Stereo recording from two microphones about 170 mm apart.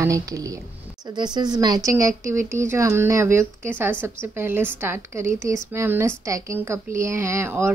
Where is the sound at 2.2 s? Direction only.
15° right (ahead or behind).